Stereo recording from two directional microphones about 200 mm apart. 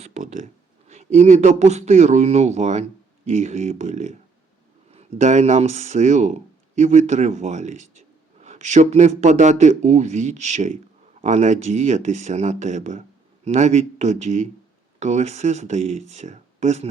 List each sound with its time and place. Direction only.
0.0 s speech: 35° right (ahead or behind)